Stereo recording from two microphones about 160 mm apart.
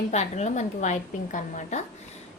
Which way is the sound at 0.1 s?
45° left (ahead or behind).